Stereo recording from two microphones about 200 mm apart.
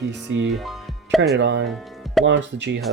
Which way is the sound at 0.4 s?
Centre (ahead or behind).